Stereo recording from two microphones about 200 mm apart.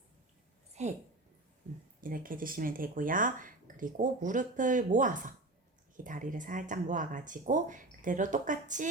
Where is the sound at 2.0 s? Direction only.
45° right (ahead or behind).